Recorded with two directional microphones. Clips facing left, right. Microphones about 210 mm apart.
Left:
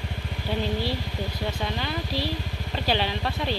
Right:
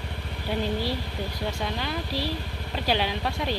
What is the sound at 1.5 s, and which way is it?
Speech, 5° right (ahead or behind).